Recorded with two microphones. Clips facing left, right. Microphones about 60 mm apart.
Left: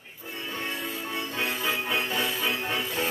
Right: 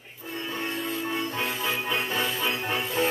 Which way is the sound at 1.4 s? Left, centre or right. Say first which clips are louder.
Even; centre.